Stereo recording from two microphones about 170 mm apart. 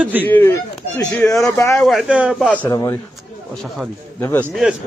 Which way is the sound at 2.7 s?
20° left (ahead or behind).